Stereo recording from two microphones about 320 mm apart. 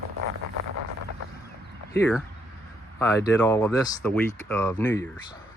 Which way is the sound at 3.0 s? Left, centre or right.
Centre.